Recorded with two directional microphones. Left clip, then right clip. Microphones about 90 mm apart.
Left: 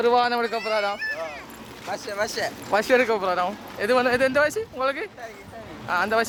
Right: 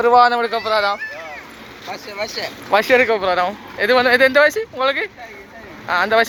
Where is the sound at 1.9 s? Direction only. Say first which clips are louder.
Right 1 dB; 45° left (ahead or behind).